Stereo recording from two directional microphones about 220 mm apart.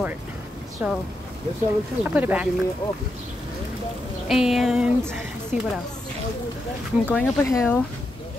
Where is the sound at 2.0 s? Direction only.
5° right (ahead or behind).